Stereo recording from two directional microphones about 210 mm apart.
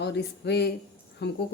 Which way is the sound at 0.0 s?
50° left (ahead or behind).